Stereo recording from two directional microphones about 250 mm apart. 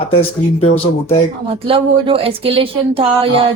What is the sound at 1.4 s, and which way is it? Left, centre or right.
Speech, right.